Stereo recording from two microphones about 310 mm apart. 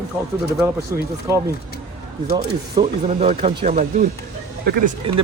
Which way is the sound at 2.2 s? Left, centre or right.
Centre.